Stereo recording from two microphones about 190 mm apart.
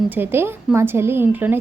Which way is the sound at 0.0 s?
10° right (ahead or behind).